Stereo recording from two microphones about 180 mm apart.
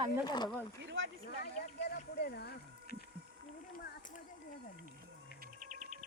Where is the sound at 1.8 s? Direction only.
60° left (ahead or behind).